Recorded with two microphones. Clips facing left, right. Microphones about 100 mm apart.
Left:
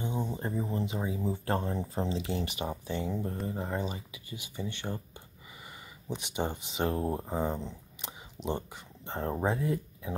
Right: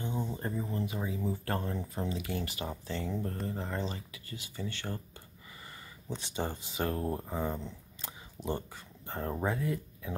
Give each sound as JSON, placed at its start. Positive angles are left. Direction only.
{"t": 0.0, "sound": "speech", "side_deg": 15}
{"t": 6.0, "sound": "speech", "side_deg": 15}